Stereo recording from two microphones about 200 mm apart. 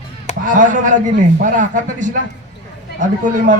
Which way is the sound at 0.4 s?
40° right (ahead or behind).